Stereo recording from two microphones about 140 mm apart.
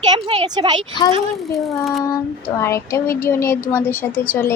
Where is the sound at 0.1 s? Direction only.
30° right (ahead or behind).